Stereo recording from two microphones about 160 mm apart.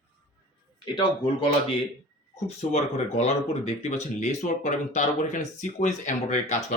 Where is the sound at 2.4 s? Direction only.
40° left (ahead or behind).